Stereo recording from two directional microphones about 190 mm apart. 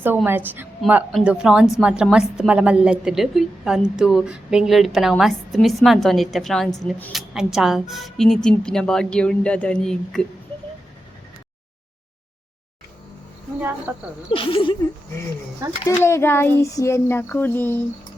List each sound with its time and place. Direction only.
0.3 s a woman's voice: 10° right (ahead or behind)
13.6 s a woman's voice: 10° right (ahead or behind)
14.3 s speech: 25° left (ahead or behind)
15.8 s a sound: 15° left (ahead or behind)